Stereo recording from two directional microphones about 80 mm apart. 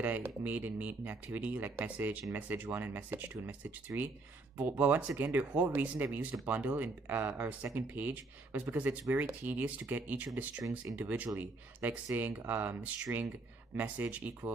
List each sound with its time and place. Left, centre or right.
0.0 s speech: right